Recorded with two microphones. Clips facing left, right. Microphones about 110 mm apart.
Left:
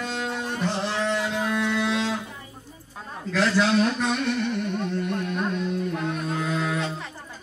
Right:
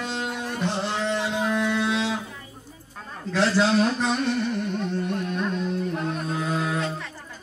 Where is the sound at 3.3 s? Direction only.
30° right (ahead or behind).